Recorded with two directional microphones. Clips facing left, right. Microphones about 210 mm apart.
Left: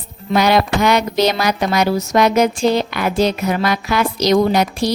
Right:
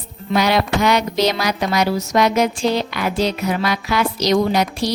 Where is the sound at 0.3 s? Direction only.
50° left (ahead or behind).